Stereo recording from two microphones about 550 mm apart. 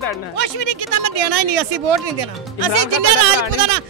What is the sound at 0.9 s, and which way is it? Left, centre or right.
Speech, right.